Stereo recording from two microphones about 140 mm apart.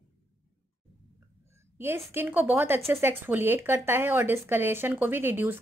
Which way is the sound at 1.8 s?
15° right (ahead or behind).